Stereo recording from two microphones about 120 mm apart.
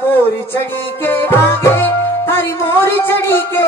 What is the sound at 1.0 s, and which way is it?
Music, 20° left (ahead or behind).